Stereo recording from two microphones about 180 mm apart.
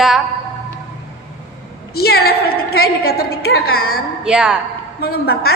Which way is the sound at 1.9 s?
60° left (ahead or behind).